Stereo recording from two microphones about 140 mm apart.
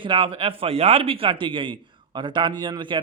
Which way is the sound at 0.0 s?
40° right (ahead or behind).